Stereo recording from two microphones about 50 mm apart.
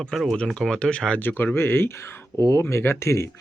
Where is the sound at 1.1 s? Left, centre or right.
Left.